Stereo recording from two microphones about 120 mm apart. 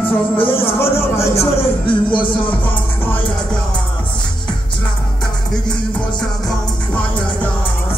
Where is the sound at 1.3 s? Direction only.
55° left (ahead or behind).